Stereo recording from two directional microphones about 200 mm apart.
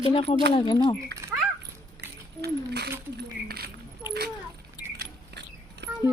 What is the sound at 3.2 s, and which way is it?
Keys jangling, 50° right (ahead or behind).